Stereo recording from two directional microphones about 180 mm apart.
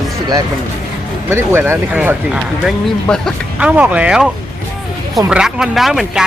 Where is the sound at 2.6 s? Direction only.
5° left (ahead or behind).